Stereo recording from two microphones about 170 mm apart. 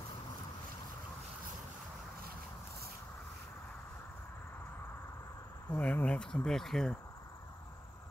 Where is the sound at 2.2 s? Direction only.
60° right (ahead or behind).